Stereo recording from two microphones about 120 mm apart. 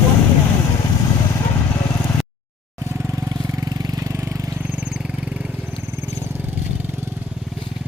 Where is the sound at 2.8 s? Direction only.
20° right (ahead or behind).